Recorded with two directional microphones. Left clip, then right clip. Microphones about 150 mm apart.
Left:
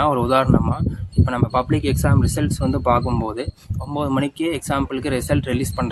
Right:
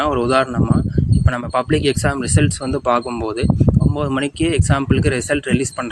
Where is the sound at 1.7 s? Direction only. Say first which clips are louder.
Right 4 dB; 20° right (ahead or behind).